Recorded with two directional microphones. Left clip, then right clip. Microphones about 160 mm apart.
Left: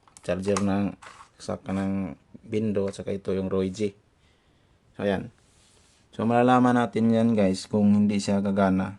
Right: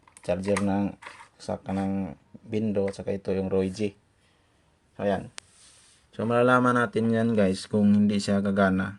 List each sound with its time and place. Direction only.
0.2 s speech: 15° left (ahead or behind)
4.9 s speech: 30° left (ahead or behind)
6.1 s speech: 20° left (ahead or behind)